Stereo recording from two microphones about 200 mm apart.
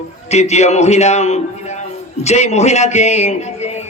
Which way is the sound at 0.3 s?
35° left (ahead or behind).